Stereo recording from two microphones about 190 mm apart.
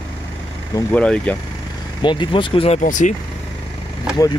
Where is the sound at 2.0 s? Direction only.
25° left (ahead or behind); by 3.1 s 40° left (ahead or behind).